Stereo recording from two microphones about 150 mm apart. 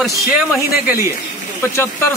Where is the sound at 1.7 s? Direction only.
15° left (ahead or behind).